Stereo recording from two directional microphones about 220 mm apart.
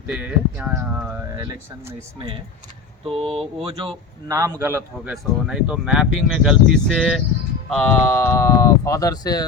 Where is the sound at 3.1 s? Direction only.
25° right (ahead or behind).